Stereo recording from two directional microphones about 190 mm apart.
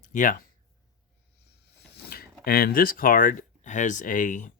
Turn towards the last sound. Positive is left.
turn(degrees=40)  # may be behind; listen again after turning